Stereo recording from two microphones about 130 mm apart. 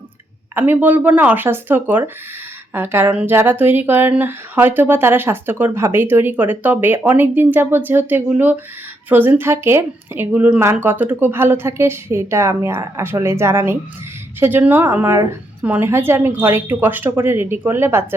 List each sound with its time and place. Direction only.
0.5 s speech: 15° right (ahead or behind)